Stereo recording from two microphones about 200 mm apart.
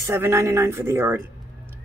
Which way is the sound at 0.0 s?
15° right (ahead or behind).